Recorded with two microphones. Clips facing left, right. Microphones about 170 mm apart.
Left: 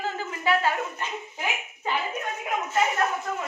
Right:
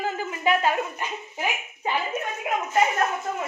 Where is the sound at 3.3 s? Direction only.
25° right (ahead or behind).